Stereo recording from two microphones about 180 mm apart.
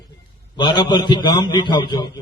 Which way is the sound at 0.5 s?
25° left (ahead or behind).